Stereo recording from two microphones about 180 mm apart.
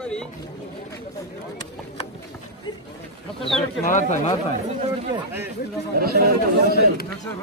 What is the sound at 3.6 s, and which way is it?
Speech, 40° left (ahead or behind).